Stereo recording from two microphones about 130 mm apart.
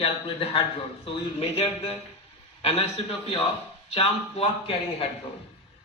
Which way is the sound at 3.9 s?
50° left (ahead or behind).